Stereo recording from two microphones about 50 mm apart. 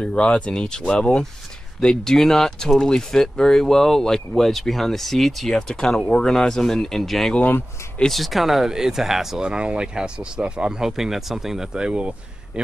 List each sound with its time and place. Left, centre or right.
0.0 s speech: centre
9.4 s speech: centre
11.9 s speech: right